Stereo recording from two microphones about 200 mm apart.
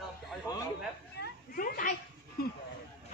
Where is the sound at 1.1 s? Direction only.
45° left (ahead or behind).